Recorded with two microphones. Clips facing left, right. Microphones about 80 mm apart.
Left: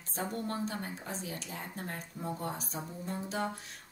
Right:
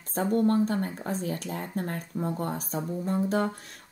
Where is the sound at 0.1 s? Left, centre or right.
Right.